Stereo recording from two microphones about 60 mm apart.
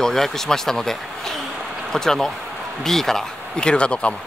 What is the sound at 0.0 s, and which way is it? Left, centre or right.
Speech, centre.